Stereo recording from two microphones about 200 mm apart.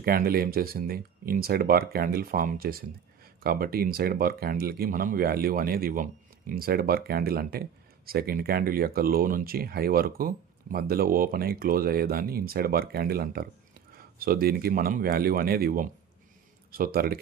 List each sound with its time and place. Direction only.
0.0 s speech: 50° right (ahead or behind)